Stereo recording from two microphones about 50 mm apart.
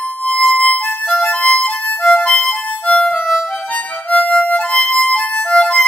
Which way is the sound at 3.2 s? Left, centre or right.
Centre.